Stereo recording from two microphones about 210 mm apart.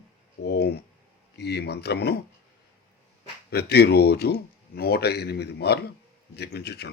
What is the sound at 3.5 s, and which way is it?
Speech, 50° left (ahead or behind).